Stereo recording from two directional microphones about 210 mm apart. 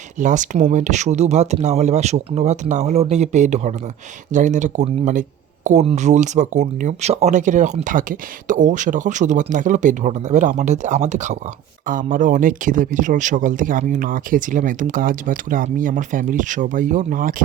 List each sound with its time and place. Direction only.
0.2 s speech: 35° right (ahead or behind)